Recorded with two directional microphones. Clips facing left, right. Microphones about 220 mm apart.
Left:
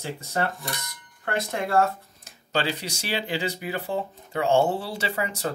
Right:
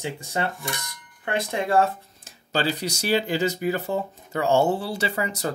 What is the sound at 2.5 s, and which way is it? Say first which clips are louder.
Speech: right 2 dB; 40° right (ahead or behind).